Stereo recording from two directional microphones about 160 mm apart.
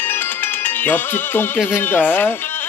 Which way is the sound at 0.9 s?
10° left (ahead or behind).